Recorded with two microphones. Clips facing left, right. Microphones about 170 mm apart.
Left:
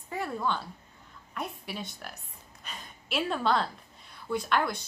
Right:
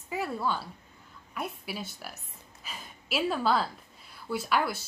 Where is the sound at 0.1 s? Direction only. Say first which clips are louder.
Even; 5° right (ahead or behind).